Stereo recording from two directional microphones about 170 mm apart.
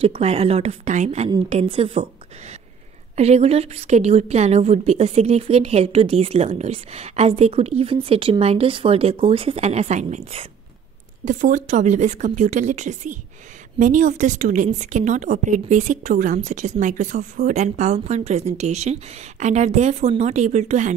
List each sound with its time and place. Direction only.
0.0 s a woman's voice: 35° right (ahead or behind)